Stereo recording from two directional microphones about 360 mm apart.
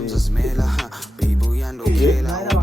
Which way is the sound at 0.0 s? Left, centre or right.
Centre.